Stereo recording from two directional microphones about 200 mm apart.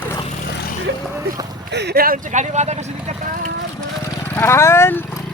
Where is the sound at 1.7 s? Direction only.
55° right (ahead or behind); by 3.2 s 35° right (ahead or behind).